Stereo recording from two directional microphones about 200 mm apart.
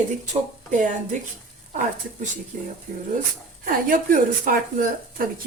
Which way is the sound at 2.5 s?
40° right (ahead or behind).